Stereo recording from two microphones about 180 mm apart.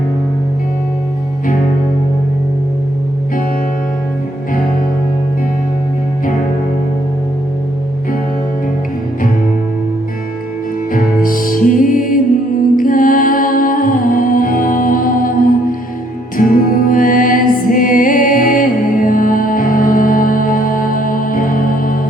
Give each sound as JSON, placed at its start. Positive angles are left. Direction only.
{"t": 10.9, "sound": "music", "side_deg": 50}